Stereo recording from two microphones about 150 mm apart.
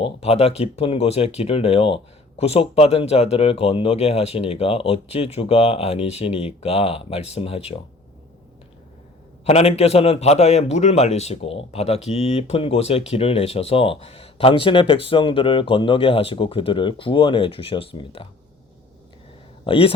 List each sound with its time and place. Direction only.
0.0 s a man's voice: 45° left (ahead or behind)
9.4 s a man's voice: 45° left (ahead or behind)
19.6 s a man's voice: 35° left (ahead or behind)